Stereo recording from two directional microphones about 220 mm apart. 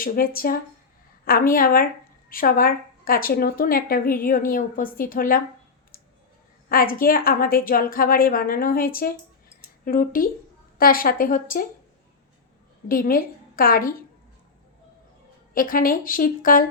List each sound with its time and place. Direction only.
0.0 s a woman's voice: 40° left (ahead or behind)
6.7 s a woman's voice: 40° left (ahead or behind)
12.9 s a woman's voice: 40° left (ahead or behind)
15.5 s a woman's voice: 40° left (ahead or behind)